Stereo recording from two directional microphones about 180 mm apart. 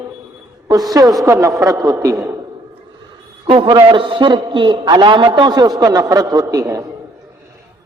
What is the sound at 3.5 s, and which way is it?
A man's voice, 25° right (ahead or behind).